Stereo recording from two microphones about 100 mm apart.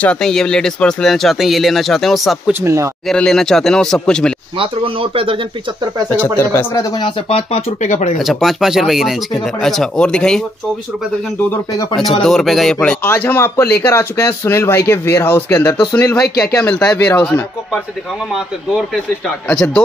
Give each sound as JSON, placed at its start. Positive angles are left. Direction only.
{"t": 0.0, "sound": "speech", "side_deg": 10}
{"t": 2.6, "sound": "speech", "side_deg": -30}
{"t": 3.2, "sound": "speech", "side_deg": 5}
{"t": 4.6, "sound": "speech", "side_deg": -65}
{"t": 6.3, "sound": "speech", "side_deg": 30}
{"t": 7.0, "sound": "speech", "side_deg": 70}
{"t": 8.2, "sound": "speech", "side_deg": 0}
{"t": 12.2, "sound": "speech", "side_deg": 5}
{"t": 13.0, "sound": "speech", "side_deg": 20}
{"t": 19.2, "sound": "speech", "side_deg": 5}